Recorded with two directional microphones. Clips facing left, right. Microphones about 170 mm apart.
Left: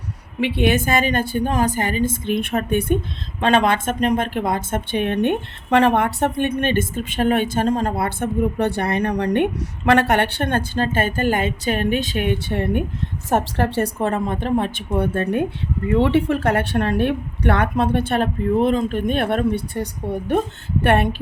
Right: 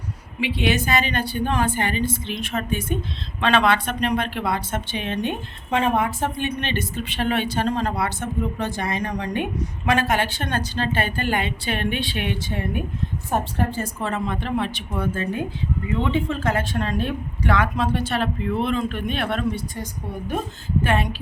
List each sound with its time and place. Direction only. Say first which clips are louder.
0.3 s speech: left 4 dB; 55° left (ahead or behind)
3.4 s speech: left 2 dB; 45° left (ahead or behind); by 12.8 s 65° left (ahead or behind)
13.3 s a woman's voice: left 5 dB; 85° left
14.0 s a woman's voice: left 5 dB; 50° left (ahead or behind)